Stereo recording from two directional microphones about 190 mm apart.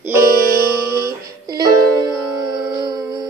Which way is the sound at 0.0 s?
15° right (ahead or behind).